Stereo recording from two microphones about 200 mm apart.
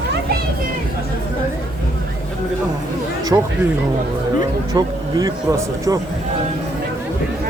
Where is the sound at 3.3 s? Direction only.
10° right (ahead or behind).